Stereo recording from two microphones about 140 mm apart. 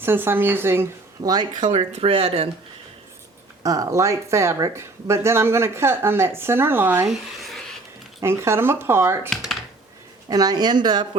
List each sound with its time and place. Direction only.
0.0 s speech: 15° right (ahead or behind)
1.7 s speech: 45° right (ahead or behind)
3.6 s speech: 25° right (ahead or behind)
7.1 s a sound: centre (ahead or behind)
8.2 s speech: 20° right (ahead or behind)
9.3 s computer keyboard: centre (ahead or behind)
10.2 s speech: 25° right (ahead or behind)